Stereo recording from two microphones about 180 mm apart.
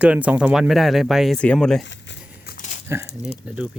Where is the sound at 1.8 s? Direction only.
80° left.